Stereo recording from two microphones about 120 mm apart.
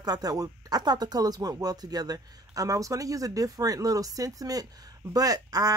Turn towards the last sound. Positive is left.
turn(degrees=-30)  # may be behind; listen again after turning